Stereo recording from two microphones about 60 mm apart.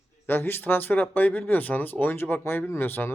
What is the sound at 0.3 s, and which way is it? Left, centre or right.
Speech, left.